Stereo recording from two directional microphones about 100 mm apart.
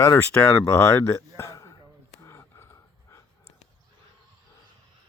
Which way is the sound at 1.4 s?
30° left (ahead or behind).